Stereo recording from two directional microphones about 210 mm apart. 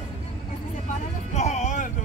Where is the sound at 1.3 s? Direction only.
35° left (ahead or behind).